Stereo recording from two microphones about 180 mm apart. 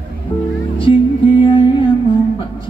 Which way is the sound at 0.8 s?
30° left (ahead or behind).